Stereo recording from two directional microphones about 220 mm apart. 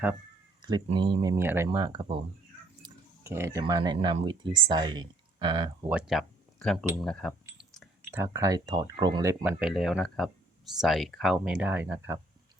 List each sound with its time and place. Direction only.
0.6 s speech: 20° right (ahead or behind)
5.9 s speech: 5° right (ahead or behind)
7.0 s a sound: 5° left (ahead or behind)
8.1 s speech: 15° right (ahead or behind)
9.4 s speech: 5° right (ahead or behind)